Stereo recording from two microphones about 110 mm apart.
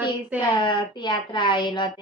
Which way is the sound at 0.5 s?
45° left (ahead or behind).